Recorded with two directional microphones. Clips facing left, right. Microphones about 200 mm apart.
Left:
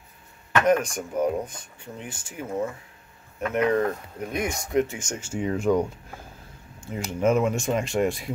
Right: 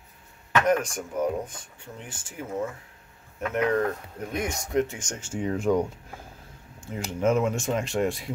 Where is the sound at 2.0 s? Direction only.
15° left (ahead or behind); by 5.9 s centre (ahead or behind).